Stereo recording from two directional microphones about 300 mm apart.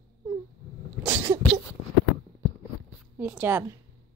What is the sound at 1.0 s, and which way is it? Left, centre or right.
Speech, centre.